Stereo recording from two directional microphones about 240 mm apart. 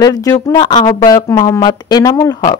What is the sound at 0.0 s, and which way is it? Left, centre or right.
A woman's voice, centre.